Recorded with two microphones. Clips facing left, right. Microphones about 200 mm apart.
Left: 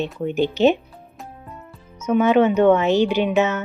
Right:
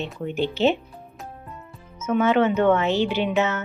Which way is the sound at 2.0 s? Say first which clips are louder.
Left 4 dB; 15° left (ahead or behind).